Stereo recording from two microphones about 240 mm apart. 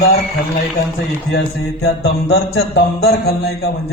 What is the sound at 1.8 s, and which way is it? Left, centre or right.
Music, left.